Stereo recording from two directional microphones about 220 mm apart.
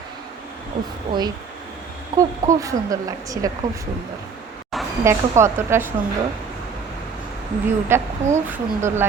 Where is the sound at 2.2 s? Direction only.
15° right (ahead or behind).